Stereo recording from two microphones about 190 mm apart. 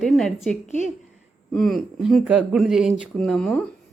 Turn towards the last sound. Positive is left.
turn(degrees=5)  # may be behind; listen again after turning